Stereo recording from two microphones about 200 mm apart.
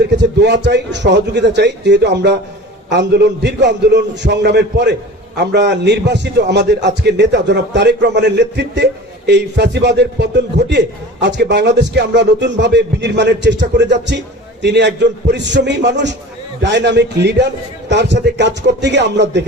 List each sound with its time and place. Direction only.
0.3 s a man's voice: 60° right (ahead or behind)